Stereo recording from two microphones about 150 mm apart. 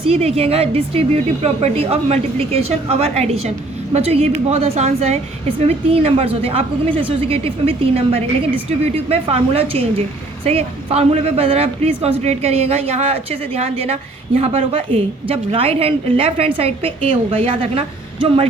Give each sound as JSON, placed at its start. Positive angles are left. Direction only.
{"t": 0.0, "sound": "a woman's voice", "side_deg": -40}